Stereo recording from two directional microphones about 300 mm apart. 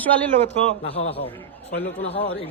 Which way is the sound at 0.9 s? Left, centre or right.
Left.